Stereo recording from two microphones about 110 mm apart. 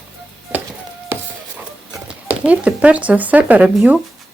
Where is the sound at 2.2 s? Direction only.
10° right (ahead or behind).